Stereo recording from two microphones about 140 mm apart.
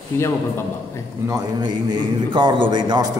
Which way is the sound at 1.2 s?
30° right (ahead or behind).